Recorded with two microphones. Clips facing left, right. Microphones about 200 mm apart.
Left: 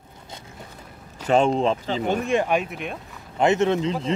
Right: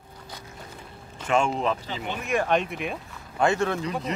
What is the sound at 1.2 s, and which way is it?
Speech, 35° left (ahead or behind).